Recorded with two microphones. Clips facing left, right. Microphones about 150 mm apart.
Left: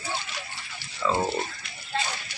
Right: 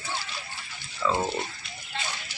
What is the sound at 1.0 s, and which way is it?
Speech, 5° left (ahead or behind).